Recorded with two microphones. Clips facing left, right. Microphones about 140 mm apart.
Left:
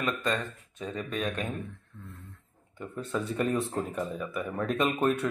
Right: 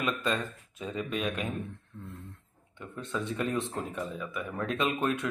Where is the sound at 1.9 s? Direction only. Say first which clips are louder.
Right 3 dB; 20° right (ahead or behind).